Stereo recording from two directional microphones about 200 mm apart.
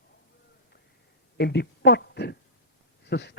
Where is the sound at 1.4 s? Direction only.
55° left (ahead or behind).